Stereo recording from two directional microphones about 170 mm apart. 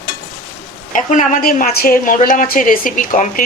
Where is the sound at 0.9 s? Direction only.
45° left (ahead or behind).